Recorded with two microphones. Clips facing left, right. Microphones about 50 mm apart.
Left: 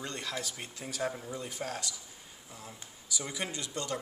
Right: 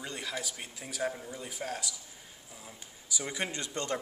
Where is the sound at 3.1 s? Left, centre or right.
Right.